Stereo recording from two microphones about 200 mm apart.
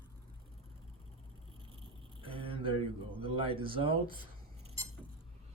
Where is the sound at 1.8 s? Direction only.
25° right (ahead or behind).